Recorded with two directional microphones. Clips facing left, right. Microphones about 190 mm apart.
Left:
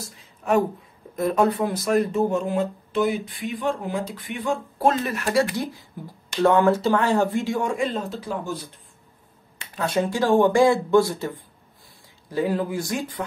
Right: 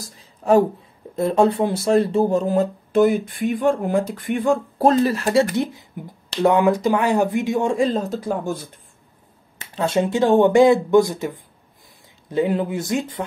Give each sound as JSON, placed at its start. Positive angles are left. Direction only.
{"t": 0.0, "sound": "a sound", "side_deg": -30}
{"t": 1.1, "sound": "speech", "side_deg": -30}
{"t": 7.7, "sound": "speech", "side_deg": -35}
{"t": 9.8, "sound": "speech", "side_deg": -25}